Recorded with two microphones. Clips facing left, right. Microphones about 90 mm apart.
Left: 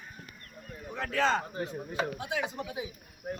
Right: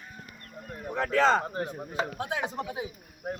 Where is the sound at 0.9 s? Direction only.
45° right (ahead or behind).